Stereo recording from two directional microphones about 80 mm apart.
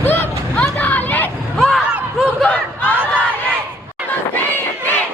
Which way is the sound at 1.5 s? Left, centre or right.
Centre.